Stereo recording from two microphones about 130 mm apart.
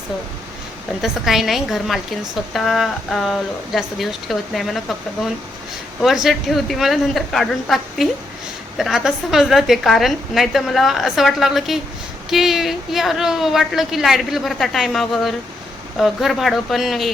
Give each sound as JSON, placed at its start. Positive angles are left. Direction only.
{"t": 1.0, "sound": "a woman's voice", "side_deg": 0}